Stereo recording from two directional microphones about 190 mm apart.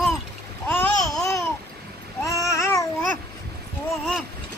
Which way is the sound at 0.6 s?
10° left (ahead or behind).